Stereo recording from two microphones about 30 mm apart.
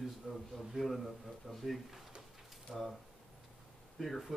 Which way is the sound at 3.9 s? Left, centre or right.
Centre.